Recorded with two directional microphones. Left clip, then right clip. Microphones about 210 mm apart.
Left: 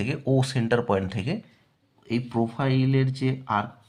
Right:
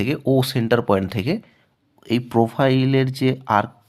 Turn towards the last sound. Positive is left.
turn(degrees=-55)  # may be behind; listen again after turning